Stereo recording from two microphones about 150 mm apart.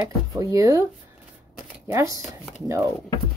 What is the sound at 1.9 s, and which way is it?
Speech, 20° right (ahead or behind).